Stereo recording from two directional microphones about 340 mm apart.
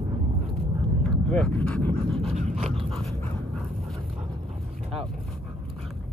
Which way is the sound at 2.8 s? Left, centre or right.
Centre.